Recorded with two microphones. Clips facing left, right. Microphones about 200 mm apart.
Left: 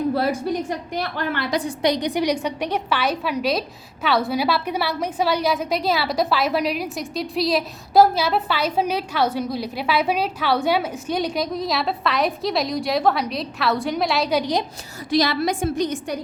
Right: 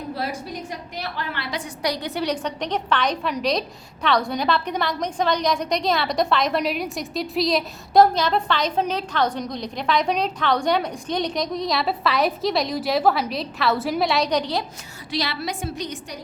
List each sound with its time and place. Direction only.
0.9 s a woman's voice: 50° left (ahead or behind)
1.8 s a woman's voice: 20° left (ahead or behind)
15.1 s a woman's voice: 45° left (ahead or behind)